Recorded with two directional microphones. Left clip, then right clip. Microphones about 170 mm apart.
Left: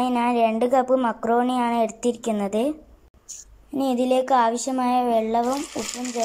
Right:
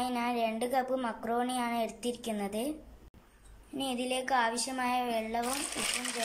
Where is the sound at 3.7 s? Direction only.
25° left (ahead or behind).